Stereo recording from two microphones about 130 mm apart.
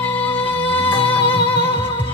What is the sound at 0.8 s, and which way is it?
Music, 40° left (ahead or behind).